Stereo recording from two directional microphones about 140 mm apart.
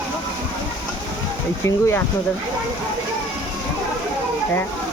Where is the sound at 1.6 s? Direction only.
20° left (ahead or behind).